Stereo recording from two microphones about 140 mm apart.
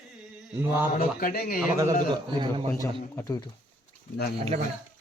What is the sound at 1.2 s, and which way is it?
Speech, 90° left.